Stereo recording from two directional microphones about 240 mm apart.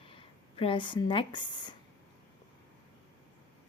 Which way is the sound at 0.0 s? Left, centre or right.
Left.